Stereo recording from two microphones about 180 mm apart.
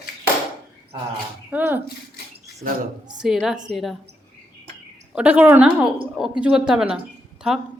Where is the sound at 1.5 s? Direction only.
10° right (ahead or behind).